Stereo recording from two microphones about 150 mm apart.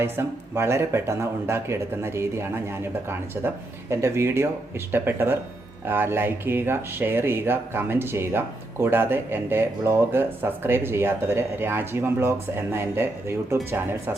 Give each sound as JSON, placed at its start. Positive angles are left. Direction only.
{"t": 0.0, "sound": "speech", "side_deg": -15}